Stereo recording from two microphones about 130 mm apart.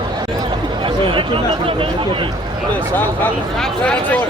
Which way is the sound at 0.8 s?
40° right (ahead or behind).